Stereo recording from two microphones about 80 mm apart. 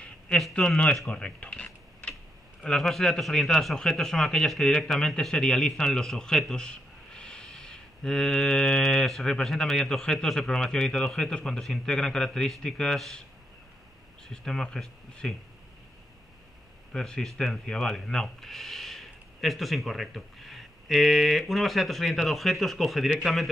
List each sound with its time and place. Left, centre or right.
0.6 s speech: centre
14.2 s speech: centre
16.9 s speech: centre